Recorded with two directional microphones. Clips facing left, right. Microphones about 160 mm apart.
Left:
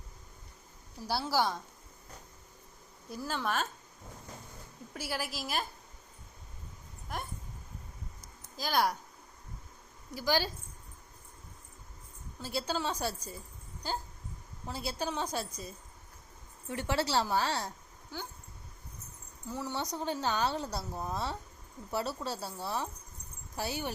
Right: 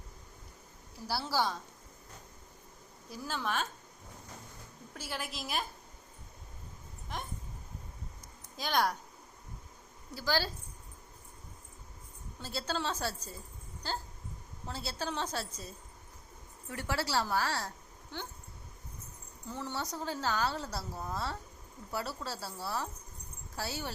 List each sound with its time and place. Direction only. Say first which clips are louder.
1.0 s a woman's voice: left 2 dB; 15° left (ahead or behind)
3.2 s a woman's voice: left 2 dB; centre (ahead or behind)
4.9 s a woman's voice: left 3 dB; 10° left (ahead or behind)
8.5 s a woman's voice: left 1 dB; 5° left (ahead or behind)
10.2 s a woman's voice: left 2 dB; 15° left (ahead or behind)
12.4 s a woman's voice: left 2 dB; 10° left (ahead or behind)
18.1 s a woman's voice: even; 5° left (ahead or behind)
19.5 s a woman's voice: left 2 dB; 10° left (ahead or behind)
19.7 s a woman's voice: left 3 dB; 20° left (ahead or behind)